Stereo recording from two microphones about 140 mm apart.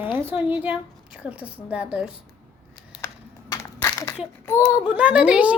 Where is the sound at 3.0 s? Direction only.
20° left (ahead or behind).